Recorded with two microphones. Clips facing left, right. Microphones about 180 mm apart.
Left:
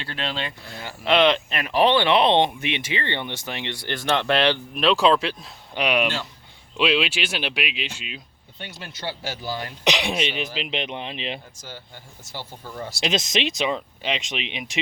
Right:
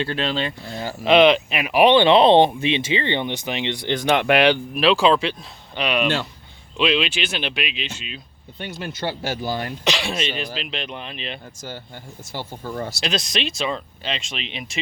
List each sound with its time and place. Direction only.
0.1 s speech: 35° right (ahead or behind)
1.0 s speech: 15° right (ahead or behind)
4.8 s speech: centre (ahead or behind)
5.7 s speech: 10° left (ahead or behind)
8.5 s speech: 50° right (ahead or behind)
9.8 s speech: 15° left (ahead or behind)
12.3 s speech: 55° right (ahead or behind)
13.0 s speech: 20° left (ahead or behind)